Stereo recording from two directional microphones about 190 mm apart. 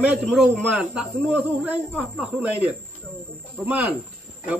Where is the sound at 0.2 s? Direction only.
Centre (ahead or behind).